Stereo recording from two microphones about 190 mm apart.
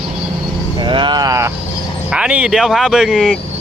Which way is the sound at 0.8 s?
25° right (ahead or behind).